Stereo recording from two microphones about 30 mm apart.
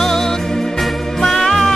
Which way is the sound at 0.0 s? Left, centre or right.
Centre.